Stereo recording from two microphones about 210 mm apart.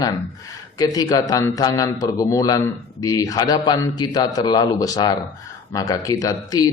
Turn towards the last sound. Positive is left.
turn(degrees=15)  # may be behind; listen again after turning